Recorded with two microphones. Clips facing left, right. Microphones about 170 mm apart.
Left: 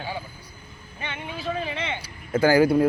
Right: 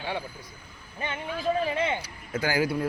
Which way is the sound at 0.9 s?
35° right (ahead or behind).